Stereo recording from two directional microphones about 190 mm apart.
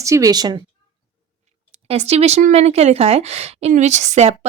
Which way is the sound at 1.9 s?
35° right (ahead or behind).